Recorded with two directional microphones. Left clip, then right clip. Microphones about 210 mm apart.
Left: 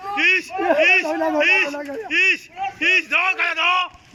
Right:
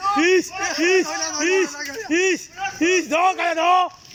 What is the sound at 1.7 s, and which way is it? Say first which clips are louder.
Speech: left 2 dB; 40° left (ahead or behind).